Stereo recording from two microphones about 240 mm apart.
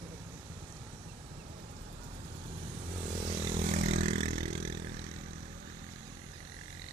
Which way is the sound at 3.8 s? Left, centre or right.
Right.